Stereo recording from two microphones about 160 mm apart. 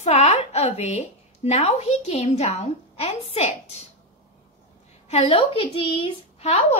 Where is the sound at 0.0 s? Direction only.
45° left (ahead or behind).